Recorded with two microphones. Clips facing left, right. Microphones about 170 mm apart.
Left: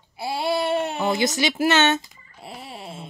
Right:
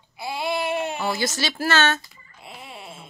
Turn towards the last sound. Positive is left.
turn(degrees=35)  # may be behind; listen again after turning